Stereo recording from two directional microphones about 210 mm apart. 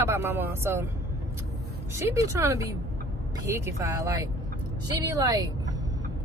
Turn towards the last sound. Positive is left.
turn(degrees=-20)  # may be behind; listen again after turning